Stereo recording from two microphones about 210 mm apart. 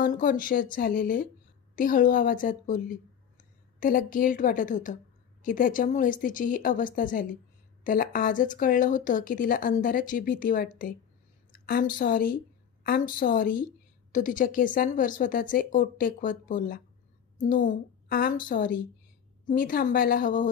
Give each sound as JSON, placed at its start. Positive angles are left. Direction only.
{"t": 0.0, "sound": "speech", "side_deg": 40}
{"t": 11.5, "sound": "a sound", "side_deg": 45}
{"t": 12.0, "sound": "speech", "side_deg": 45}